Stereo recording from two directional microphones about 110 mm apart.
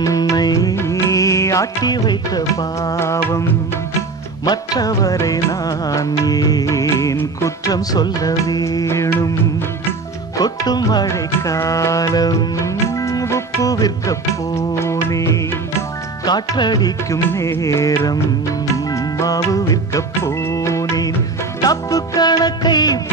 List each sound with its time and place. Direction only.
0.0 s music: 30° left (ahead or behind)
4.5 s music: 35° left (ahead or behind)
10.4 s music: 35° left (ahead or behind)
16.3 s music: 40° left (ahead or behind)
17.3 s music: 25° left (ahead or behind)